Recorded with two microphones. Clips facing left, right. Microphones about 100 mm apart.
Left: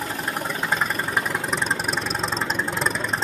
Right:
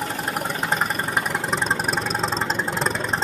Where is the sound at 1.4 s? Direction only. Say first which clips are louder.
Right 2 dB; 35° right (ahead or behind).